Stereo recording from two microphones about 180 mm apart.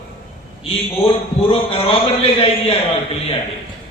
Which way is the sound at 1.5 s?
30° left (ahead or behind).